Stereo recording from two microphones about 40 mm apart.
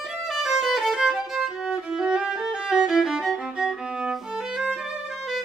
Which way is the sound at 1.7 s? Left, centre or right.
Centre.